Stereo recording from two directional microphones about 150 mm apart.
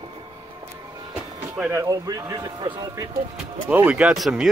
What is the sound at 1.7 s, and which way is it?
Speech, 20° right (ahead or behind).